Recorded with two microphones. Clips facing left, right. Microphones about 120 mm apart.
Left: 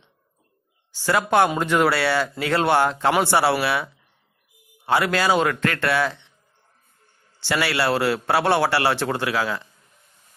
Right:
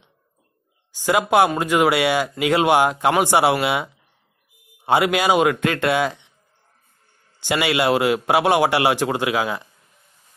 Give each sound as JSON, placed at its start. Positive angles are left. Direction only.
{"t": 0.9, "sound": "a man's voice", "side_deg": -15}
{"t": 7.3, "sound": "a man's voice", "side_deg": -15}